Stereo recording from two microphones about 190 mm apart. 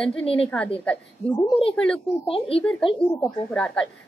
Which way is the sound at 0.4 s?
5° left (ahead or behind).